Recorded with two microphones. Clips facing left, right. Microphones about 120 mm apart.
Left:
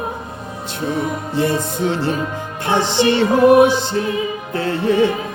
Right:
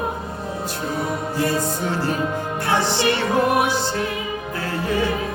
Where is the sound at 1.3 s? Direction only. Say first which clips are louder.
Left 5 dB; 25° left (ahead or behind).